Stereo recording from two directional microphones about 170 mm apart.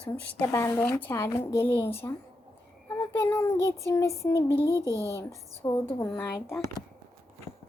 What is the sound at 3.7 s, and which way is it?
Speech, 15° left (ahead or behind).